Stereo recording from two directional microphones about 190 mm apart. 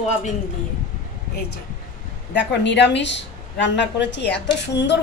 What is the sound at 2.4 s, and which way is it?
A woman's voice, 65° left (ahead or behind).